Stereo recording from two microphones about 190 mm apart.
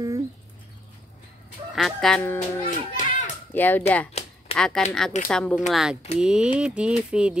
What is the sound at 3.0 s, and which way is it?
Children playing, 40° left (ahead or behind).